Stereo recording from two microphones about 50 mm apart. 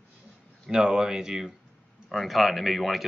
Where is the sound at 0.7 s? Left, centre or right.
Centre.